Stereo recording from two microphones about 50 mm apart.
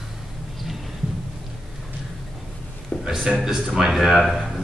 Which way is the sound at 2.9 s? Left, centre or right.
Left.